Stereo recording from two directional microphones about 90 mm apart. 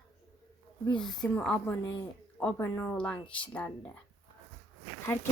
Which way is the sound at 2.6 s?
30° left (ahead or behind).